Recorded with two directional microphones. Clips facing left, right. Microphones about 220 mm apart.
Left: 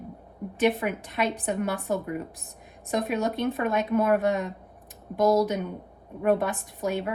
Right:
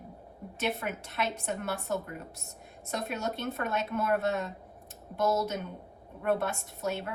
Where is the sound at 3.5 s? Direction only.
15° left (ahead or behind).